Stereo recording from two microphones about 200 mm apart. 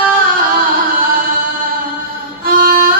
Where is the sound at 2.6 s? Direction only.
45° right (ahead or behind).